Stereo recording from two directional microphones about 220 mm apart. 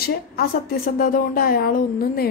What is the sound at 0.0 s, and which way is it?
A woman's voice, 45° left (ahead or behind).